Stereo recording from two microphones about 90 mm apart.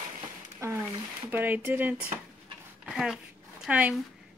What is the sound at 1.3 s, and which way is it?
Speech, 25° right (ahead or behind).